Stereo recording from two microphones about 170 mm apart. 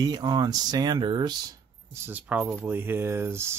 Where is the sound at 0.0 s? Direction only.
25° right (ahead or behind).